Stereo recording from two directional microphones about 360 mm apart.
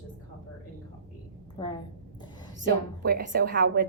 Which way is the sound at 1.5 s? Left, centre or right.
Centre.